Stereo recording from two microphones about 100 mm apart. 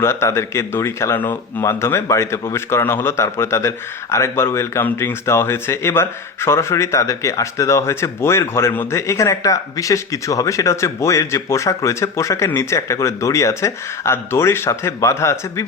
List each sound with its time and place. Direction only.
0.0 s a man's voice: 25° left (ahead or behind)